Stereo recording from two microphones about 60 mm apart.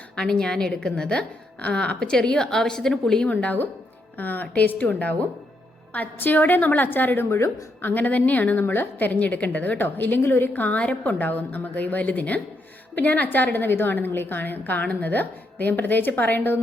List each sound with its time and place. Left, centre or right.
0.2 s a woman's voice: centre
3.2 s a woman's voice: left
7.3 s a woman's voice: left
10.5 s a woman's voice: left